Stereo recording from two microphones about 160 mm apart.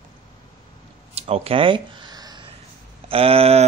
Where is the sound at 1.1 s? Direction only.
40° right (ahead or behind).